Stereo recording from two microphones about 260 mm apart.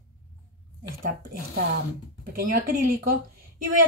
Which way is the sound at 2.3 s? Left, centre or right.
Right.